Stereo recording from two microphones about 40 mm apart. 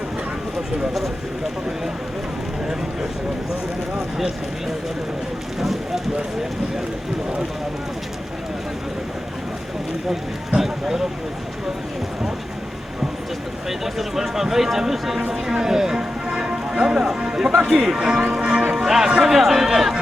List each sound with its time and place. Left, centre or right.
5.5 s speech: centre
10.1 s speech: centre
13.7 s speech: centre; by 18.6 s right
18.8 s speech: centre